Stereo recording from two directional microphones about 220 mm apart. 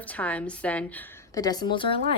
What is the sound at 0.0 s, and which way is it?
Speech, 5° left (ahead or behind).